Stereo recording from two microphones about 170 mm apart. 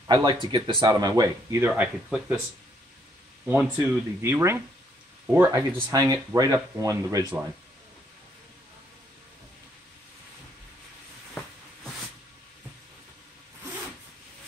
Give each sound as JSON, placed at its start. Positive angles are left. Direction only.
{"t": 0.0, "sound": "speech", "side_deg": -25}
{"t": 1.7, "sound": "speech", "side_deg": -5}
{"t": 3.7, "sound": "speech", "side_deg": -15}